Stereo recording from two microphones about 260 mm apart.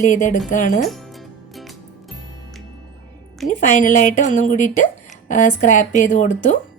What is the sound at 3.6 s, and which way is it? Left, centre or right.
Speech, left.